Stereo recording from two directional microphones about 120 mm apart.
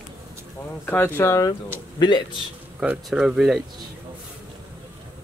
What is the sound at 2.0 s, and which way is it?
Speech, 40° left (ahead or behind).